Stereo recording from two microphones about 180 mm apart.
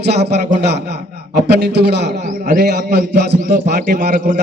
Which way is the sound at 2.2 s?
45° right (ahead or behind).